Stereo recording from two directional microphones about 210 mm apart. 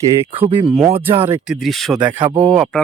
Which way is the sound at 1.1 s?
10° right (ahead or behind).